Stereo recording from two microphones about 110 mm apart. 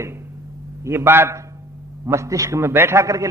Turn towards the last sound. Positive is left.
turn(degrees=-25)  # may be behind; listen again after turning